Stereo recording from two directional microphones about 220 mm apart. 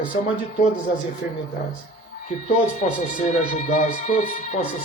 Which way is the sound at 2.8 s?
35° left (ahead or behind).